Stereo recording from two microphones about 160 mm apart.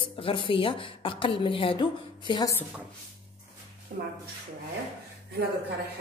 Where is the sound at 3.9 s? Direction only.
65° right (ahead or behind).